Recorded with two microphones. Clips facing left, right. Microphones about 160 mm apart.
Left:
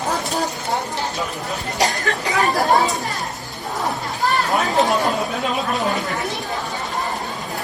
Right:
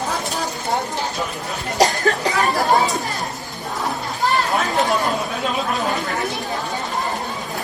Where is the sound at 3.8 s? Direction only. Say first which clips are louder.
Even; centre (ahead or behind).